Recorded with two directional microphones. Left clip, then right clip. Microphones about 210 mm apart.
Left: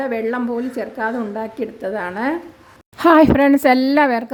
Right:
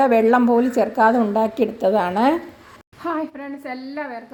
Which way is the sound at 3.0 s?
50° left (ahead or behind).